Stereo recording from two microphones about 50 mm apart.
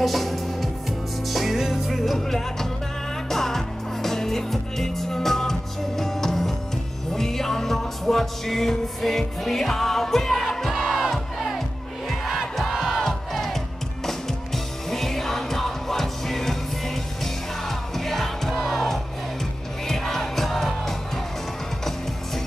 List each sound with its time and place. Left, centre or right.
0.0 s music: centre
10.7 s crowd: centre
12.1 s music: centre